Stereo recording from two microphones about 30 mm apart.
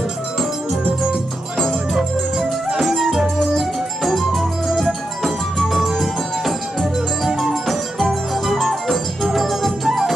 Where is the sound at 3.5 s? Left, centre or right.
Centre.